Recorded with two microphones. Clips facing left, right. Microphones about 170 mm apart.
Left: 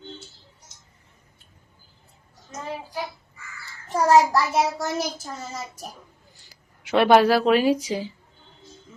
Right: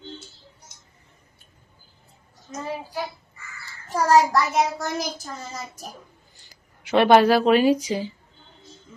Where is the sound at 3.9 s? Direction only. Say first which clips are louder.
Left 1 dB; 20° left (ahead or behind).